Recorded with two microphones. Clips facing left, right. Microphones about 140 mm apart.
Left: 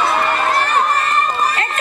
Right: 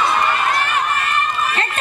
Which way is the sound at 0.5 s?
35° left (ahead or behind).